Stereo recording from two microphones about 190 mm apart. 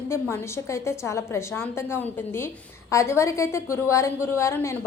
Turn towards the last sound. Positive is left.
turn(degrees=15)  # may be behind; listen again after turning